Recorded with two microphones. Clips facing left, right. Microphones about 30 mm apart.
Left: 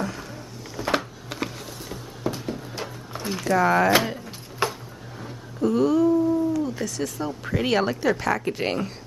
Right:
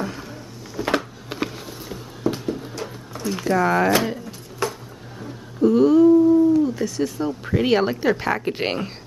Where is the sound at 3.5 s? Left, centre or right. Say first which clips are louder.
Even; centre.